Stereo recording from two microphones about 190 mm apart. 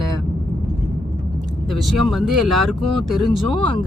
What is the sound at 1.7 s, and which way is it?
Speech, centre (ahead or behind).